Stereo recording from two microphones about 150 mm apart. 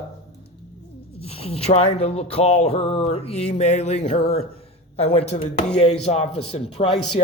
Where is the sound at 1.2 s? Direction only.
40° left (ahead or behind).